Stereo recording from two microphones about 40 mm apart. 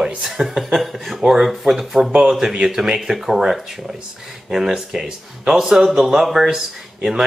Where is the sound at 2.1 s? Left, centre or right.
Centre.